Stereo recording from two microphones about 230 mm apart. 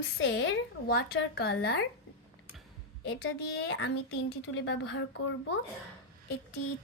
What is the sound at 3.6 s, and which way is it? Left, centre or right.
A woman's voice, left.